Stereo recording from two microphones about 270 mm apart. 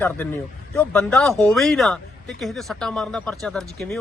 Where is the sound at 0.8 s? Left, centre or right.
Centre.